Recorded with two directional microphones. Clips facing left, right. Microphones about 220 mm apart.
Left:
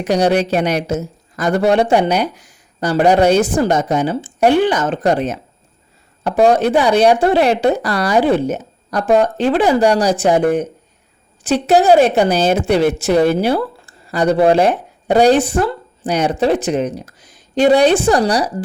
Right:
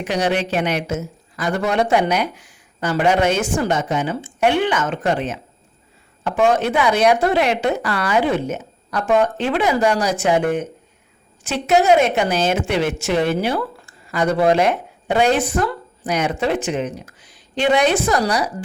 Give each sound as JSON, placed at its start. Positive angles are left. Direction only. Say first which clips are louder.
{"t": 0.0, "sound": "speech", "louder": "left 6 dB", "side_deg": 40}